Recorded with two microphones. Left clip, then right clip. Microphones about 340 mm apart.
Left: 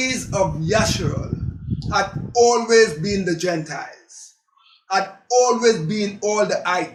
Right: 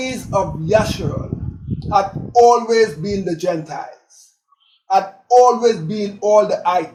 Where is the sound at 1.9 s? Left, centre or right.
Right.